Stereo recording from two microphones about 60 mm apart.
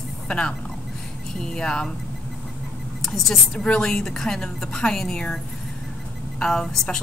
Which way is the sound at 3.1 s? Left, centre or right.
Centre.